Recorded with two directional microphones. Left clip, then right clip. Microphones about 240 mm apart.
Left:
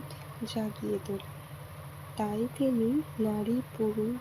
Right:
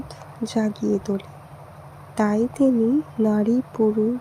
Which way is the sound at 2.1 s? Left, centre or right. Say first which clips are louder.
Right 11 dB; right.